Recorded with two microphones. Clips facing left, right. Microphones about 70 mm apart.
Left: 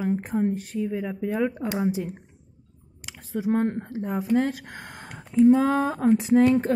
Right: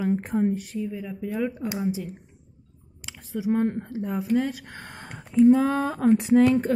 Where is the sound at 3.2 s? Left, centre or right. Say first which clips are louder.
Even; left.